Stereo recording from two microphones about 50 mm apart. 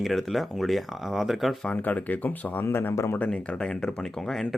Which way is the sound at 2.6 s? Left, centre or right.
Left.